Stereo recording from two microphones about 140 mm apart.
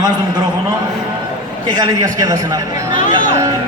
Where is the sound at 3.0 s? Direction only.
70° left (ahead or behind).